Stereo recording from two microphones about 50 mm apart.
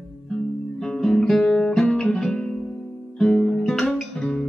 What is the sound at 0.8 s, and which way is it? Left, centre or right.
Guitar, centre.